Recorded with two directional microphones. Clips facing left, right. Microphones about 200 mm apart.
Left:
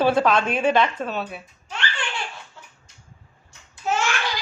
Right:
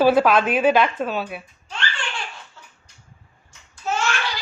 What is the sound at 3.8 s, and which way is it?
Babbling, 15° left (ahead or behind).